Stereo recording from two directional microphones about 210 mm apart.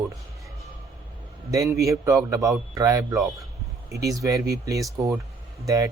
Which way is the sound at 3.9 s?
15° right (ahead or behind).